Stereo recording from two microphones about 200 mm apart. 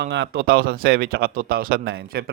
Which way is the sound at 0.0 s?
55° right (ahead or behind).